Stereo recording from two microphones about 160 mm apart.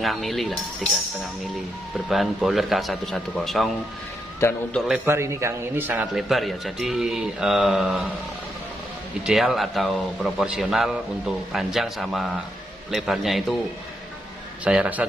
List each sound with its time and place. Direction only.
0.0 s a man's voice: centre (ahead or behind)
2.0 s a man's voice: centre (ahead or behind)
4.7 s a man's voice: centre (ahead or behind)
5.0 s speech: 15° right (ahead or behind)
6.1 s a man's voice: centre (ahead or behind)
9.2 s a man's voice: centre (ahead or behind)
14.6 s speech: 5° right (ahead or behind)